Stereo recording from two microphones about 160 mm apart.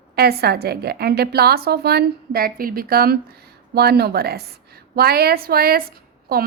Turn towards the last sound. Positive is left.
turn(degrees=-70)  # may be behind; listen again after turning